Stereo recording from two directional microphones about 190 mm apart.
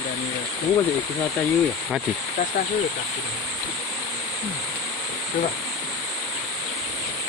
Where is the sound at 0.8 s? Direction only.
15° left (ahead or behind).